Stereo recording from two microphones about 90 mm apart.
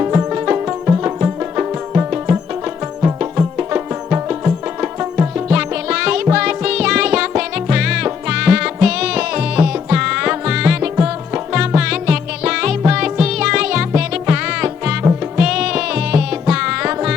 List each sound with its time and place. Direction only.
0.3 s music: 20° right (ahead or behind)